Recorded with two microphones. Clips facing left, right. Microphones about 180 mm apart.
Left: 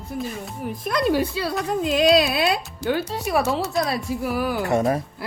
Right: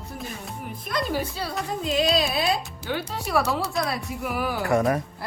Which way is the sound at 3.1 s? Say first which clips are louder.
Left 3 dB; 20° left (ahead or behind).